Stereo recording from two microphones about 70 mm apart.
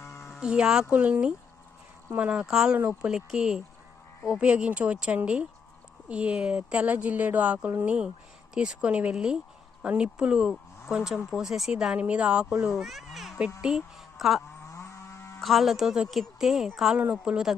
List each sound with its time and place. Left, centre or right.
0.3 s a woman's voice: centre
2.7 s speech: right
3.1 s a woman's voice: centre
12.7 s a woman's voice: centre
14.7 s a sound: left
15.4 s speech: centre
17.0 s speech: right